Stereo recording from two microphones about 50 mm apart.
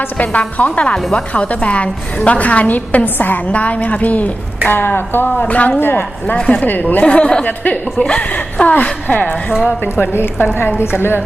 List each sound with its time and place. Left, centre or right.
0.0 s a woman's voice: left
5.4 s a woman's voice: left
6.3 s a woman's voice: left
6.7 s speech: left
7.0 s a woman's voice: left
7.4 s speech: left
9.9 s a woman's voice: left